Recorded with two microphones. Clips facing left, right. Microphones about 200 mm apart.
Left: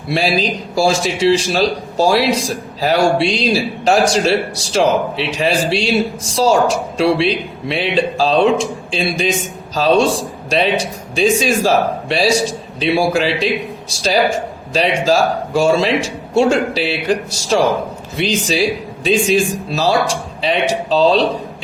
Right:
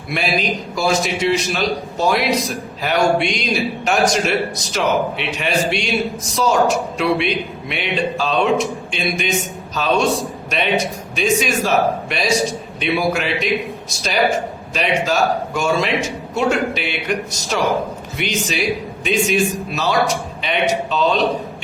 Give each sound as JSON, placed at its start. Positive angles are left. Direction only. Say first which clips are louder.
{"t": 0.1, "sound": "a man's voice", "louder": "left 4 dB", "side_deg": 30}